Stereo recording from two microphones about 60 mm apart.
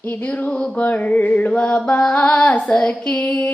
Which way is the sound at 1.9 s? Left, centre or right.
Centre.